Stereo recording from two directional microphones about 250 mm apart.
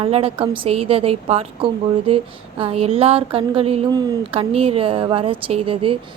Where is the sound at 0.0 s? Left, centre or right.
Right.